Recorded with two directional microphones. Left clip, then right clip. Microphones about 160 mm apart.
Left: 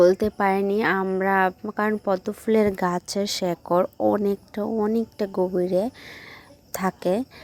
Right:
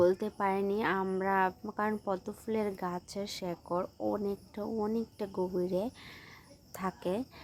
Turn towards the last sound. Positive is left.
turn(degrees=40)  # may be behind; listen again after turning